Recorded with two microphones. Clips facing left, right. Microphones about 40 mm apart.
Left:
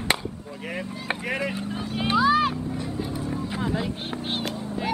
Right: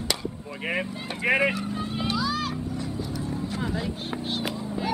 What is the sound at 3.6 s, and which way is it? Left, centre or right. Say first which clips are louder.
Vehicle: left 4 dB; centre.